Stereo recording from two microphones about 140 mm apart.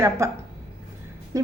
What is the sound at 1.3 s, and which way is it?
Speech, 25° right (ahead or behind).